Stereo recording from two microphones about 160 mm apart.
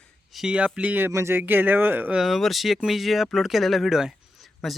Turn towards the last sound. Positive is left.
turn(degrees=0)  # may be behind; listen again after turning